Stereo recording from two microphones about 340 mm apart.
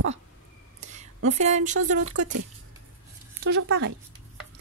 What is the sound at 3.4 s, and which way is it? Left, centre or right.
Speech, right.